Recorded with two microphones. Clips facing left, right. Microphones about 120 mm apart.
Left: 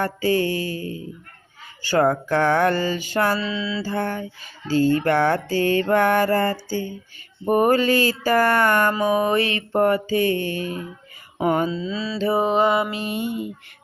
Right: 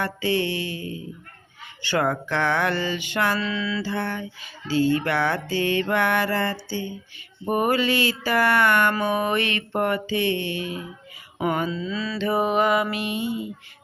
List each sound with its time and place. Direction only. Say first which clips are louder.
0.0 s music: left 3 dB; 40° left (ahead or behind)
3.3 s mantra: left 1 dB; 25° left (ahead or behind)
3.8 s mantra: left 3 dB; 45° left (ahead or behind)
7.4 s music: left 4 dB; 40° left (ahead or behind)
11.3 s mantra: left 4 dB; 40° left (ahead or behind)
13.1 s mantra: left 1 dB; 50° left (ahead or behind)